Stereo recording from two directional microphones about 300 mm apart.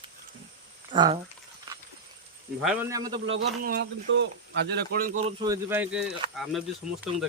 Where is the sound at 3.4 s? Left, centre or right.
Right.